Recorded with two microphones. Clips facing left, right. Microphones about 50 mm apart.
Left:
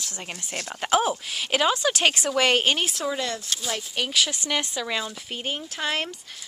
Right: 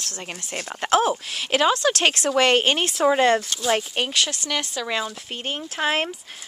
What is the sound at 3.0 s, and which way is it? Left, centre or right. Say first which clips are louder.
Speech: right 10 dB; right.